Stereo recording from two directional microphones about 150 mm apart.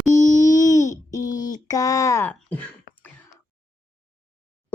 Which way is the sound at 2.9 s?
75° left (ahead or behind).